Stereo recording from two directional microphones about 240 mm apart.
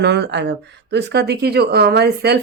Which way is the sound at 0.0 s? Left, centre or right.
Right.